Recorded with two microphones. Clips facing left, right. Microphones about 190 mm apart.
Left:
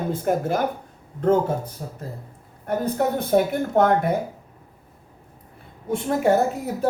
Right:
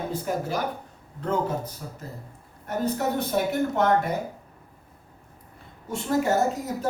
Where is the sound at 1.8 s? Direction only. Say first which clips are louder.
Left 4 dB; 35° left (ahead or behind).